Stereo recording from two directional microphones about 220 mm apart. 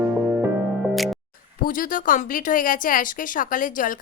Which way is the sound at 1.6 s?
40° left (ahead or behind).